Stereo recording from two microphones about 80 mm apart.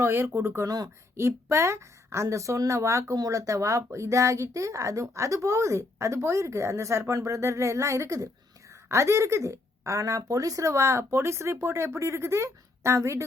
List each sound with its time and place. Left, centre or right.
0.0 s speech: right